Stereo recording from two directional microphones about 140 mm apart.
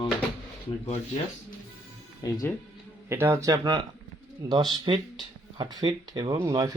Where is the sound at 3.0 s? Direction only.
15° right (ahead or behind).